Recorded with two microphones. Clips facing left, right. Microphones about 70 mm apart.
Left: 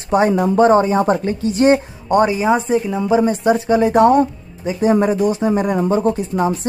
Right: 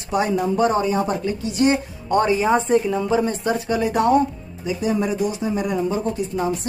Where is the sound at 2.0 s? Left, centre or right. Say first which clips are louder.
Left 4 dB; centre.